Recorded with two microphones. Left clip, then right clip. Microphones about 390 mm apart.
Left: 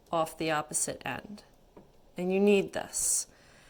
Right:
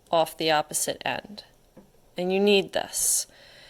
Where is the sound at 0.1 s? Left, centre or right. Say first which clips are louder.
Right 7 dB; right.